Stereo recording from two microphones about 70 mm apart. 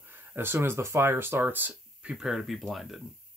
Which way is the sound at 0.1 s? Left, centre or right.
Right.